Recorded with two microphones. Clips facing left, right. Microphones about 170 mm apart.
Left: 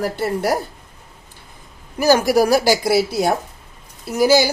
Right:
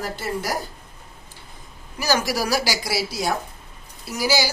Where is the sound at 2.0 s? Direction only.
55° left (ahead or behind).